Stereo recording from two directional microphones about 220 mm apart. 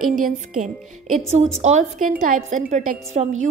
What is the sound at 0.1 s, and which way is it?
A woman's voice, 35° right (ahead or behind).